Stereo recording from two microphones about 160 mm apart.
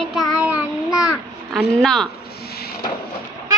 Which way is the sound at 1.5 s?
5° left (ahead or behind).